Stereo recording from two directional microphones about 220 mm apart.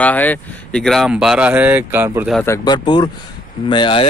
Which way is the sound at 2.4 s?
15° left (ahead or behind).